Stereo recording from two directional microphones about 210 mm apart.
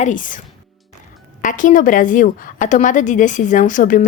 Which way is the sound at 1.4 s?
40° left (ahead or behind).